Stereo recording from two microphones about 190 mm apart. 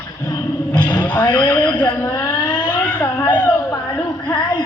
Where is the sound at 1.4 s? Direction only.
10° left (ahead or behind).